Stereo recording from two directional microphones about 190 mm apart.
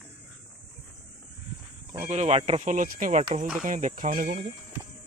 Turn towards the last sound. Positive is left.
turn(degrees=-45)  # may be behind; listen again after turning